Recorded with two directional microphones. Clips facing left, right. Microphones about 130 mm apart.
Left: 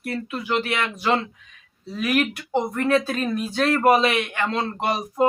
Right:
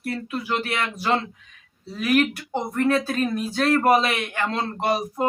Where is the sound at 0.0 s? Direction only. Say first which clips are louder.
Even; 35° right (ahead or behind).